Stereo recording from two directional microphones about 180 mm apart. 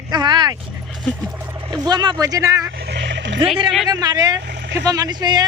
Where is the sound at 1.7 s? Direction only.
20° right (ahead or behind).